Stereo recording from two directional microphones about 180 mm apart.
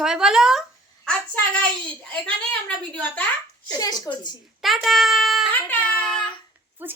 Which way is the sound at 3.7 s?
20° left (ahead or behind).